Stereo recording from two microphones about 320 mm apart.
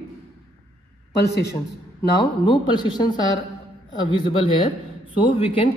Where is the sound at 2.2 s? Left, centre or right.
Centre.